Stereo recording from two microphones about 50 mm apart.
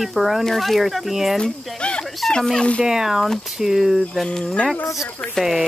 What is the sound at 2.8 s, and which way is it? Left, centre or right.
Speech, centre.